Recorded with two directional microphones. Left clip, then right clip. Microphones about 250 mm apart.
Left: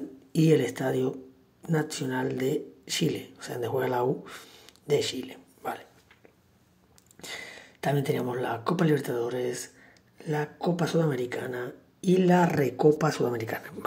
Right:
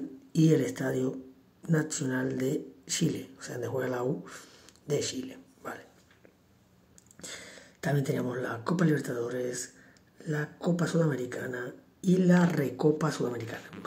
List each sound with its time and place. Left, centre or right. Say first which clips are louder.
0.4 s speech: left 3 dB; centre
7.2 s speech: left 5 dB; centre